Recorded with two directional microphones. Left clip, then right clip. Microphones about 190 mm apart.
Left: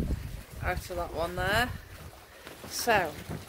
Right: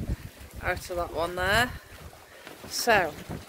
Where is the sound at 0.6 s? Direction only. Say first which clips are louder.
Right 3 dB; 35° right (ahead or behind).